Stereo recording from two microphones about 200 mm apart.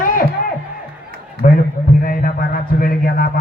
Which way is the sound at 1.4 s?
45° left (ahead or behind).